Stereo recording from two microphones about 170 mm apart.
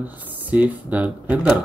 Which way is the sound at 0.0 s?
10° right (ahead or behind).